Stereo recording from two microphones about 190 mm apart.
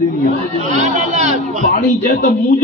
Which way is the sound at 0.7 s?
35° right (ahead or behind).